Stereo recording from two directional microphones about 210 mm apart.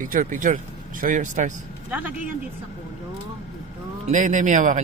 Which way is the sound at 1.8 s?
10° right (ahead or behind).